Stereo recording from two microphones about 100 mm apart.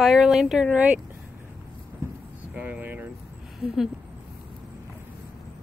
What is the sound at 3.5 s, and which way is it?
Speech, 5° right (ahead or behind).